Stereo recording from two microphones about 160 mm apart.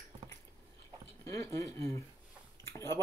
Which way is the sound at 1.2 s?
20° left (ahead or behind).